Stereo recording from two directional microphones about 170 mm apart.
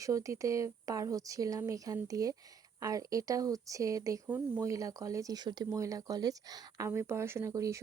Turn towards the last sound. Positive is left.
turn(degrees=-20)  # may be behind; listen again after turning